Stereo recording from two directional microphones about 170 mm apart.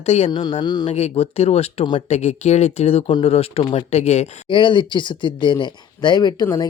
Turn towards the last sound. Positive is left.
turn(degrees=25)  # may be behind; listen again after turning